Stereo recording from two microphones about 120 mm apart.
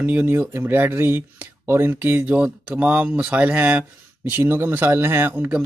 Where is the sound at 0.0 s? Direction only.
15° right (ahead or behind).